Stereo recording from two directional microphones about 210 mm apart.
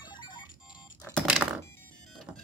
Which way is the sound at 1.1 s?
5° right (ahead or behind).